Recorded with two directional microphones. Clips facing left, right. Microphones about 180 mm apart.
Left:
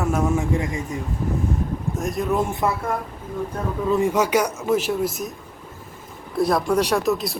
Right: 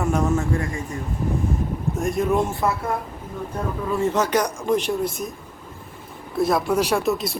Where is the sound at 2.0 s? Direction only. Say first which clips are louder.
Right 2 dB; centre (ahead or behind).